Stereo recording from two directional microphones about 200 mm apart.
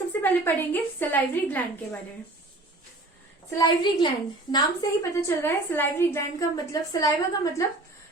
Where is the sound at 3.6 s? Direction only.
20° left (ahead or behind).